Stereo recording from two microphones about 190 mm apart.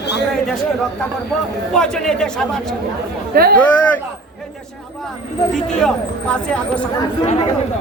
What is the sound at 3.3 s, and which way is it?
Speech, 55° right (ahead or behind).